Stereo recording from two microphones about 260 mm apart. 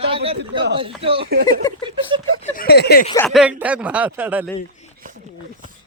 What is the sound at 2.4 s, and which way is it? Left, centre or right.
Speech, left.